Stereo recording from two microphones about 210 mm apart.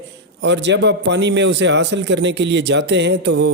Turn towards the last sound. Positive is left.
turn(degrees=-55)  # may be behind; listen again after turning